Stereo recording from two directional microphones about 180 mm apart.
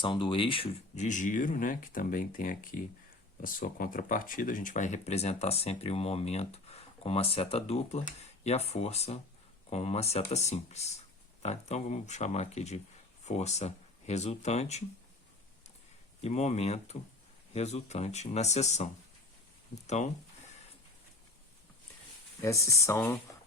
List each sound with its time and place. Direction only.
0.0 s speech: 25° left (ahead or behind)
16.2 s speech: 40° left (ahead or behind)
22.4 s speech: 15° left (ahead or behind)